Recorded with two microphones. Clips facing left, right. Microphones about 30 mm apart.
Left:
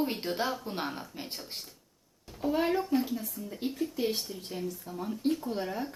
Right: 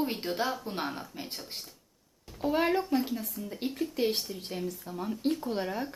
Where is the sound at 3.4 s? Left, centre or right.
Centre.